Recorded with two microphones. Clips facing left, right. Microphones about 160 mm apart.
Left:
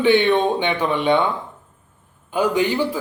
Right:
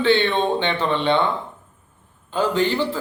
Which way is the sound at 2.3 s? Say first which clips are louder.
Left 1 dB; 15° left (ahead or behind).